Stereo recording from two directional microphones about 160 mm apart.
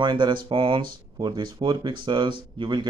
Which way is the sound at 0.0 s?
30° right (ahead or behind).